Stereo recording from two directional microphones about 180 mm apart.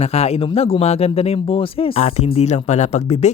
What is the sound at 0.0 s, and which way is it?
Speech, 35° left (ahead or behind).